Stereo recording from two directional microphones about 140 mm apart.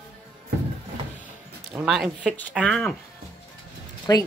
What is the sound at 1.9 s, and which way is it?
Speech, 5° right (ahead or behind).